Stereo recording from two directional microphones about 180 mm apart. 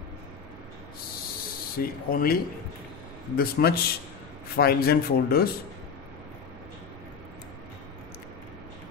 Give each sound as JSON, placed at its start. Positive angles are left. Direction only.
{"t": 1.8, "sound": "speech", "side_deg": 55}